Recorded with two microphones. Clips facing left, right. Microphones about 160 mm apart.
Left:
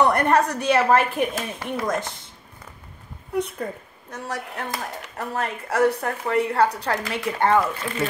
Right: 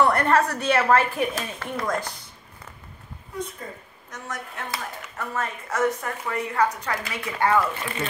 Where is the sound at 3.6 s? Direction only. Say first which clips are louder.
Left 6 dB; 55° left (ahead or behind).